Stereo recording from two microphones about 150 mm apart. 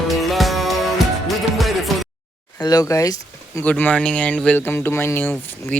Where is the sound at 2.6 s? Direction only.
25° left (ahead or behind).